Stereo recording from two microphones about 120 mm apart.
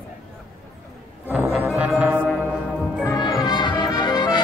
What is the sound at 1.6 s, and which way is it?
Music, 10° right (ahead or behind).